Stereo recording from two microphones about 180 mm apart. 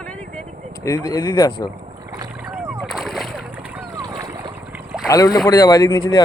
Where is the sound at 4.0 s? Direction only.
20° right (ahead or behind).